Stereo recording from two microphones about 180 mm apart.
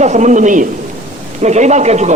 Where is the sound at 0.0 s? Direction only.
40° right (ahead or behind).